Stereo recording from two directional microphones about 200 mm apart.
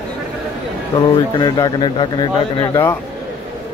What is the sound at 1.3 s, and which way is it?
Speech, 20° left (ahead or behind).